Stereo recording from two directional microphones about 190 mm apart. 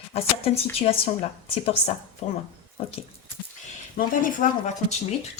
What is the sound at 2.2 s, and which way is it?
Speech, 35° left (ahead or behind).